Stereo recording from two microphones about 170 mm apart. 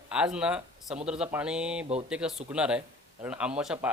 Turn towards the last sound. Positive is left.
turn(degrees=-5)  # may be behind; listen again after turning